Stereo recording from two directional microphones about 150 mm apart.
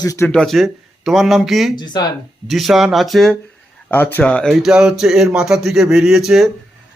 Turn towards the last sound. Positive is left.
turn(degrees=-5)  # may be behind; listen again after turning